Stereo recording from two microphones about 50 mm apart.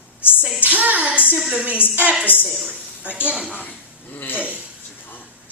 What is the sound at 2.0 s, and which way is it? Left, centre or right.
Speech, right.